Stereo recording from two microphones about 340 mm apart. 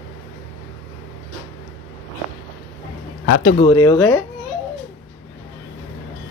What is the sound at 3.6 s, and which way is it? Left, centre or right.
Speech, centre.